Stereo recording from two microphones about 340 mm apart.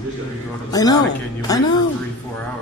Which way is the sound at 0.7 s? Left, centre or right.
Centre.